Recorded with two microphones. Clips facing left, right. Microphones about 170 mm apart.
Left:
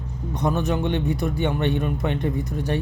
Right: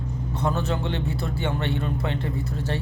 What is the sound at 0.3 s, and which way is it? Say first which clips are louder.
A man's voice: left 3 dB; 15° left (ahead or behind).